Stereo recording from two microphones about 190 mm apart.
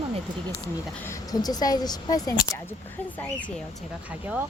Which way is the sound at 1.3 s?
20° left (ahead or behind).